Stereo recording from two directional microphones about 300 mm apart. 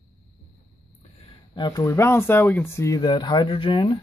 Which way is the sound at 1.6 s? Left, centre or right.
Centre.